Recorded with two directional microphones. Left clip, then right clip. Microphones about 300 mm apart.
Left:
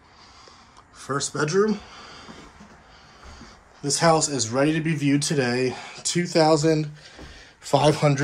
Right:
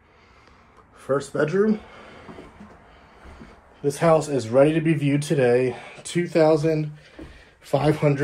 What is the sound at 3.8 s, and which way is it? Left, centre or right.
Speech, centre.